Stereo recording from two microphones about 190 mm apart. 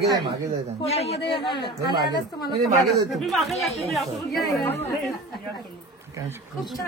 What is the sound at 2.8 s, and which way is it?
Speech, centre (ahead or behind).